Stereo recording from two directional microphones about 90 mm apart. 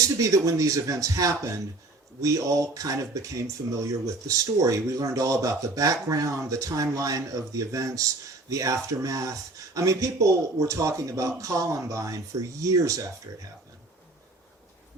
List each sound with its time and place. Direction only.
0.2 s speech: 40° right (ahead or behind)